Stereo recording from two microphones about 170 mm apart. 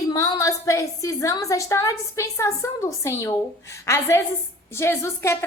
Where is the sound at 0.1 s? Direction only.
20° left (ahead or behind).